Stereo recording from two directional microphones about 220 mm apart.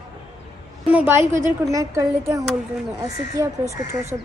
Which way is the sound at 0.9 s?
10° right (ahead or behind).